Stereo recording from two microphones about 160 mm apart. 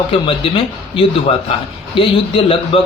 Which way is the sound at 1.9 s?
35° left (ahead or behind).